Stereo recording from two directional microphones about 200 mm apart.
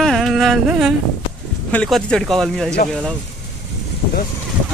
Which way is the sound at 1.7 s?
5° left (ahead or behind).